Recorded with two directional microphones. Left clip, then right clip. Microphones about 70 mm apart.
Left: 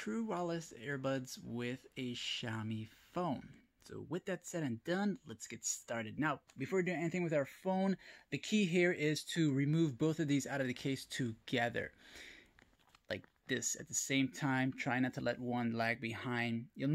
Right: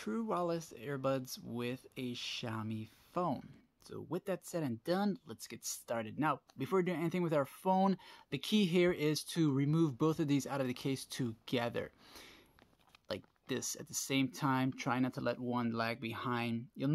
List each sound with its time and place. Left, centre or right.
0.0 s speech: right
6.6 s speech: right